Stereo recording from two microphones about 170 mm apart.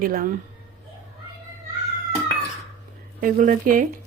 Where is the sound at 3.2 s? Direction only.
55° right (ahead or behind).